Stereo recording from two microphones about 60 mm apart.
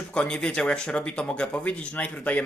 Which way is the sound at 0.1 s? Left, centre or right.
Centre.